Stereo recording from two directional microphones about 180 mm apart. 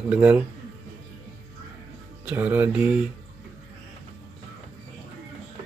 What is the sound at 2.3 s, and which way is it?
Speech, 10° right (ahead or behind).